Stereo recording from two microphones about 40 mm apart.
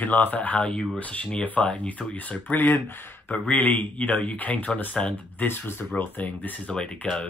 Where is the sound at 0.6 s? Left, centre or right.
Left.